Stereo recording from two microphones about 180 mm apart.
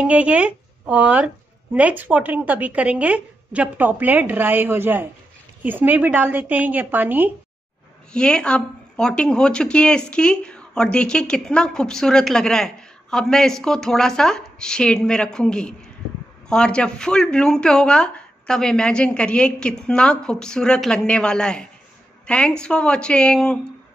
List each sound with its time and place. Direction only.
0.0 s a woman's voice: 5° right (ahead or behind)
8.1 s a woman's voice: 5° left (ahead or behind)